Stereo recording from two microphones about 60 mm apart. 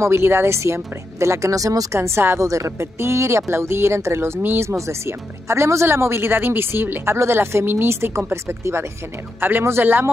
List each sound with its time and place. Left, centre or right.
0.0 s speech: right
2.0 s speech: right
2.4 s a woman's voice: right
3.0 s speech: right
4.4 s speech: right
4.6 s speech: right
9.4 s speech: right